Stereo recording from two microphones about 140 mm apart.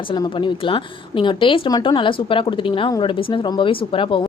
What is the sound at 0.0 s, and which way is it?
A woman's voice, 35° left (ahead or behind).